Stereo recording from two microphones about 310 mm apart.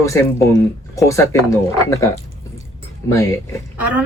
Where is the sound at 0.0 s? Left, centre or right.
Centre.